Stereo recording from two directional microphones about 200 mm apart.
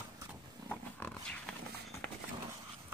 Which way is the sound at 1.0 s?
5° left (ahead or behind).